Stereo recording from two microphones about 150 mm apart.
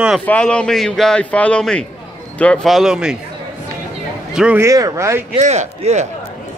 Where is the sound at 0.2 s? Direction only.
10° left (ahead or behind).